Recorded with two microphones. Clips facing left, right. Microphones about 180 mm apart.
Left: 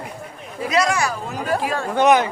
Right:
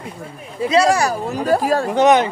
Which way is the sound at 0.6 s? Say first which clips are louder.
Right 5 dB; 30° right (ahead or behind).